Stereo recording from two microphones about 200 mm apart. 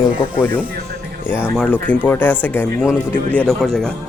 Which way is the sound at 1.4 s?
5° left (ahead or behind).